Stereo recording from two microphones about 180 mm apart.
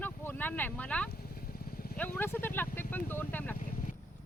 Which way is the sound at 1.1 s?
55° left (ahead or behind).